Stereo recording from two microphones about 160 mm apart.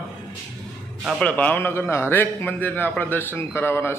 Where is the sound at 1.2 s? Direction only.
10° left (ahead or behind).